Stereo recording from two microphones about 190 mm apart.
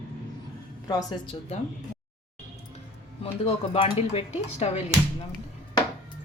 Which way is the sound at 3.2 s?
30° left (ahead or behind).